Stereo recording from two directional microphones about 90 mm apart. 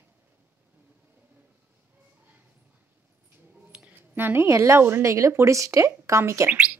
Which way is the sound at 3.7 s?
20° right (ahead or behind).